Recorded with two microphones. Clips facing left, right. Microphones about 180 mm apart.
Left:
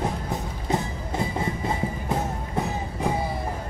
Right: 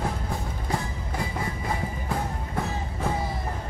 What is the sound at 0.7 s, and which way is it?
Music, 25° left (ahead or behind).